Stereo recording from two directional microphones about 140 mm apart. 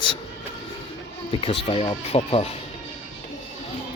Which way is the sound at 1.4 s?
40° left (ahead or behind).